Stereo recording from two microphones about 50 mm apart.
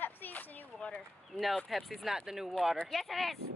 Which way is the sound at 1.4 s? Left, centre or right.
Centre.